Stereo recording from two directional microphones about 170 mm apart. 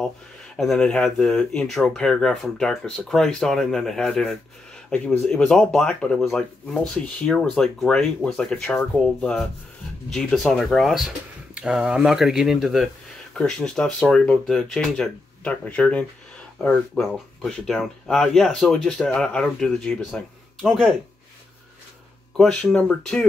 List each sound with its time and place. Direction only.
0.6 s speech: 5° left (ahead or behind)
22.4 s speech: 5° left (ahead or behind)